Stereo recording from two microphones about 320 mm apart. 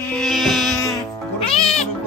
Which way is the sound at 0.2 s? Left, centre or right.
Centre.